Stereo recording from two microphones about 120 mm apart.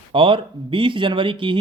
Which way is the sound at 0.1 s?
45° right (ahead or behind).